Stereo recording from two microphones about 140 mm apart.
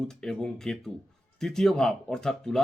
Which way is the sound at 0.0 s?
5° left (ahead or behind).